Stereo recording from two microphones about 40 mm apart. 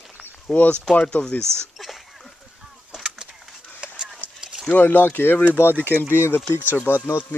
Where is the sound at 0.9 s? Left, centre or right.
Left.